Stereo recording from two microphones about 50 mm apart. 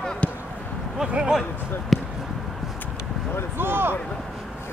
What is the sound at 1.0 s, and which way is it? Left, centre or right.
Speech, centre.